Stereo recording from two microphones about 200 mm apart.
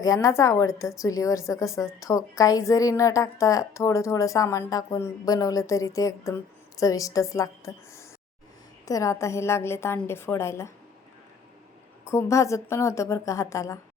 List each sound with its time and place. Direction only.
0.0 s a woman's voice: 15° left (ahead or behind)
12.0 s a woman's voice: 15° left (ahead or behind)